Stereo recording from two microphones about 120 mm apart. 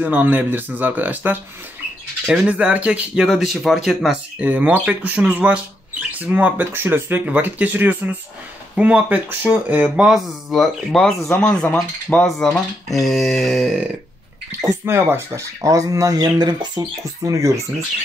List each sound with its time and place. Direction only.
0.0 s speech: 15° right (ahead or behind)
14.9 s speech: 20° right (ahead or behind)